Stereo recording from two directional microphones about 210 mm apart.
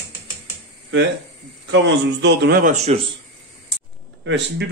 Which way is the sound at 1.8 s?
55° right (ahead or behind).